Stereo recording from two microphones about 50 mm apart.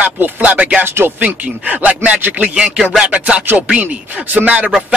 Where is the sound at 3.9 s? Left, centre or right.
Right.